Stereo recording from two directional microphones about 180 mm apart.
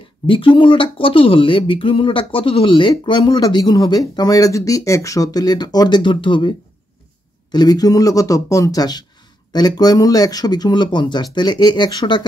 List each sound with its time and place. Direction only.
0.3 s speech: 30° left (ahead or behind)
7.5 s speech: 20° left (ahead or behind)